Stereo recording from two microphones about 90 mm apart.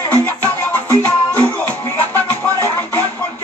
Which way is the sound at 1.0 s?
15° left (ahead or behind).